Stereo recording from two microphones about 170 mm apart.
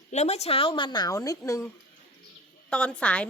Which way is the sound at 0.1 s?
40° left (ahead or behind).